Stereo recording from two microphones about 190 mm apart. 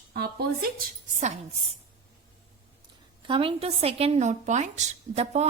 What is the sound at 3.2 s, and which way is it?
A woman's voice, 30° right (ahead or behind).